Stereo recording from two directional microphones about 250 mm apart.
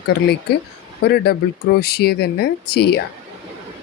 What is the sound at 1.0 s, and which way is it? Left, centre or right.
Speech, left.